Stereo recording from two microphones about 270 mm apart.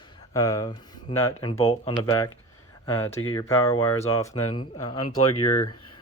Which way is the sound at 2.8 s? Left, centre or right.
Centre.